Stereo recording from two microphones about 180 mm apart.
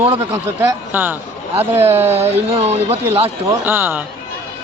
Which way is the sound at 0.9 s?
10° right (ahead or behind).